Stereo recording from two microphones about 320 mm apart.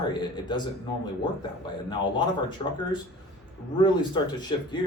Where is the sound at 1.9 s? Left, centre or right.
Centre.